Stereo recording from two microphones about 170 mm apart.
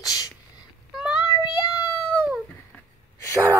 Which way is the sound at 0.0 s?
20° left (ahead or behind).